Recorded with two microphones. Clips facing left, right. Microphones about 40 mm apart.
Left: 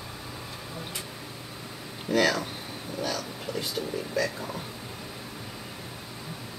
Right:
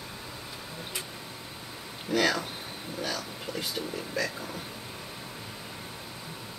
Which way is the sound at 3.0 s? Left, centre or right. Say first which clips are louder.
Left 2 dB; right.